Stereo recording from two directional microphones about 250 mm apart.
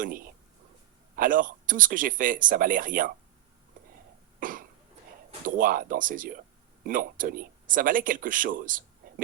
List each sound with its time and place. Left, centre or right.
1.1 s speech: right
4.4 s cough: right
5.5 s speech: right